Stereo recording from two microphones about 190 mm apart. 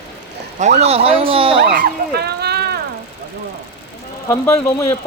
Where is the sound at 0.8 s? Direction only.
35° right (ahead or behind).